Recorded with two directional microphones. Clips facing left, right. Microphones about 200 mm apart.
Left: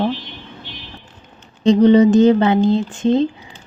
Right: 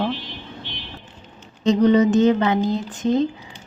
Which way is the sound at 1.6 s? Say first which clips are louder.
Left 5 dB; 30° left (ahead or behind).